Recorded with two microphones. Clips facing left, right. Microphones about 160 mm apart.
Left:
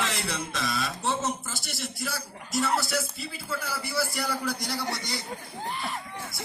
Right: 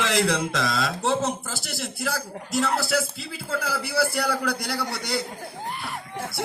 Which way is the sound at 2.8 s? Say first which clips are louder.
Right 5 dB; 70° right (ahead or behind).